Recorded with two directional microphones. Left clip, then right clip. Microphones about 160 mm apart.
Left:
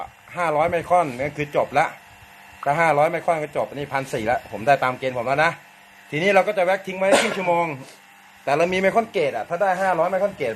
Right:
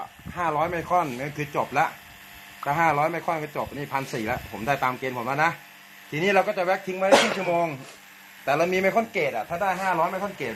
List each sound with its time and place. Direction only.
0.3 s speech: 60° left (ahead or behind)
7.1 s speech: 15° right (ahead or behind)
7.3 s speech: 55° left (ahead or behind)